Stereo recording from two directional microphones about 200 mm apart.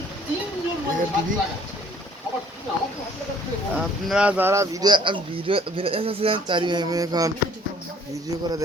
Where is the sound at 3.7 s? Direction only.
5° right (ahead or behind).